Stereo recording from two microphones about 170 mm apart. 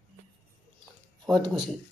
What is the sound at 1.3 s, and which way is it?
Speech, 25° right (ahead or behind).